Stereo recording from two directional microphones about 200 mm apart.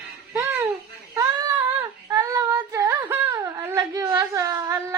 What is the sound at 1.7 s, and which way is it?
Child singing, 15° right (ahead or behind).